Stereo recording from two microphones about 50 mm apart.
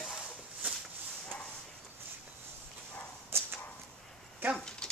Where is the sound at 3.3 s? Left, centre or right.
Right.